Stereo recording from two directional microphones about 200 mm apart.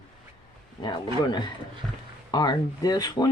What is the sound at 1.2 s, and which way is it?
Speech, 20° left (ahead or behind).